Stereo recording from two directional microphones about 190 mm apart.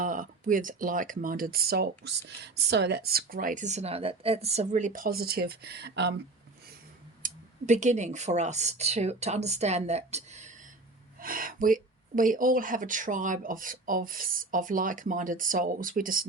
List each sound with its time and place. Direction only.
0.0 s speech: 45° right (ahead or behind); by 6.1 s 65° right (ahead or behind)
7.2 s a sound: 45° right (ahead or behind)
7.7 s a woman's voice: 40° right (ahead or behind)
11.2 s speech: 45° right (ahead or behind)